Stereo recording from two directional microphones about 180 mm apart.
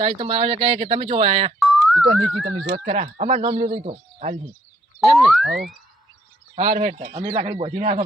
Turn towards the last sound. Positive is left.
turn(degrees=-35)  # may be behind; listen again after turning